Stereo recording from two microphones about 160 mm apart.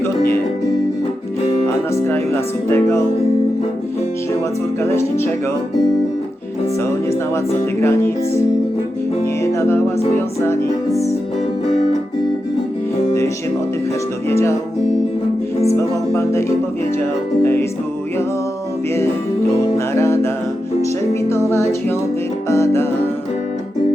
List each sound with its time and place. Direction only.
1.6 s music: 15° left (ahead or behind)
2.6 s speech: 15° left (ahead or behind)
4.8 s speech: 15° left (ahead or behind)
7.1 s speech: 15° left (ahead or behind)
9.2 s music: 20° left (ahead or behind)
10.2 s speech: 15° left (ahead or behind)
14.3 s speech: 15° left (ahead or behind)
15.7 s speech: 15° left (ahead or behind)
19.9 s music: 15° left (ahead or behind)
21.1 s speech: 15° left (ahead or behind)